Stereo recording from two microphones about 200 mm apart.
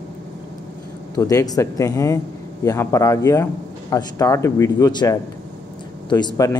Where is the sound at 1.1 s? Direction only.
15° left (ahead or behind).